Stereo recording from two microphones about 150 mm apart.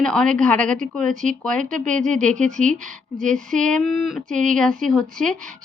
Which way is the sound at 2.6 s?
60° right (ahead or behind).